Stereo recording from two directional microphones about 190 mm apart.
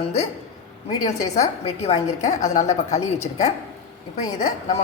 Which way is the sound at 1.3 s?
35° left (ahead or behind).